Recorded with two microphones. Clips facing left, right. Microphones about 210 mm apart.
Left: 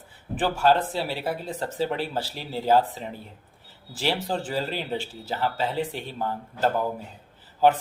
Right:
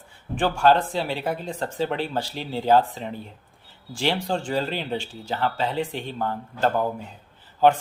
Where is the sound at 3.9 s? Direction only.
5° left (ahead or behind).